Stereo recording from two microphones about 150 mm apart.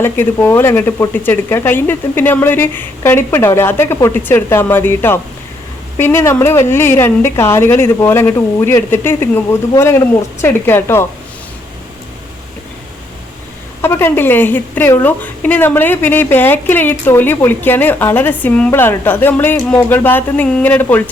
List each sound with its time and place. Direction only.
0.0 s speech: 15° left (ahead or behind)
13.8 s speech: 15° left (ahead or behind)